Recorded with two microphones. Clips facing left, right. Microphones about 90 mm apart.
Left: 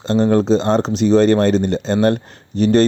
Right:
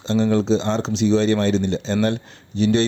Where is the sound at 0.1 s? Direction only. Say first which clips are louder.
Left 4 dB; 45° left (ahead or behind).